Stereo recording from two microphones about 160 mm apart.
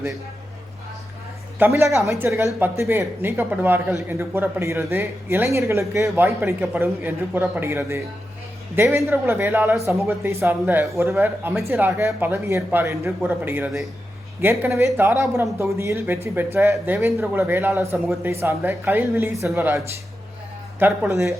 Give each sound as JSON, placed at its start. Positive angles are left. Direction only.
{"t": 1.5, "sound": "a man's voice", "side_deg": -15}